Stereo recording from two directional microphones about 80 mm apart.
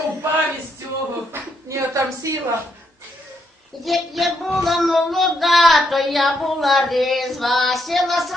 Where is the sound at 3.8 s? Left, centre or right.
Centre.